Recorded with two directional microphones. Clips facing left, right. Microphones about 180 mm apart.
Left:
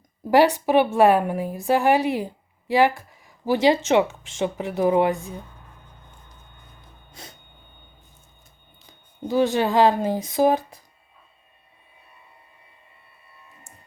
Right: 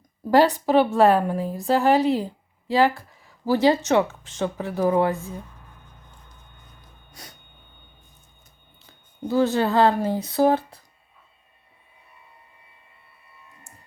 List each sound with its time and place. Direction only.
0.3 s a woman's voice: 15° left (ahead or behind)
7.1 s a sound: 25° left (ahead or behind)
8.9 s speech: 15° left (ahead or behind)